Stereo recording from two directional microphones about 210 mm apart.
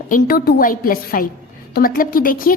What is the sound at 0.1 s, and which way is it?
A woman's voice, 45° left (ahead or behind).